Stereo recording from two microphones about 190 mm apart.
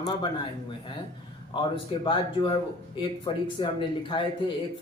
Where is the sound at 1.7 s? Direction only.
25° left (ahead or behind).